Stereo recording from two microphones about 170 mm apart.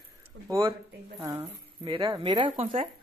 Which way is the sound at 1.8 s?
25° right (ahead or behind).